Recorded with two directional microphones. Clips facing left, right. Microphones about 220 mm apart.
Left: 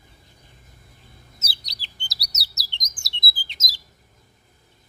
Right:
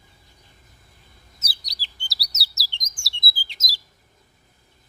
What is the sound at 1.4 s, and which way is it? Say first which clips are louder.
Bird: right 1 dB; 25° left (ahead or behind).